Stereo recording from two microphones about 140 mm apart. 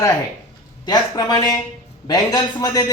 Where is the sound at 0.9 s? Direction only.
30° left (ahead or behind).